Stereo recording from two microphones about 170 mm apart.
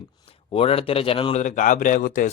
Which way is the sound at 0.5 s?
35° left (ahead or behind).